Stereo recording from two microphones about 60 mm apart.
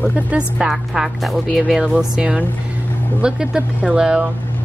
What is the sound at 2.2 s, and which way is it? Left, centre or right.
A woman's voice, centre.